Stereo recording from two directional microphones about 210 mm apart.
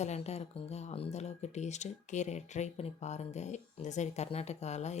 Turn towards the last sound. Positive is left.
turn(degrees=30)  # may be behind; listen again after turning